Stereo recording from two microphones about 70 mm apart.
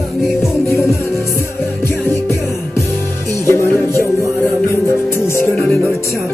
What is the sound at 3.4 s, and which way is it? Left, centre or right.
Music, left.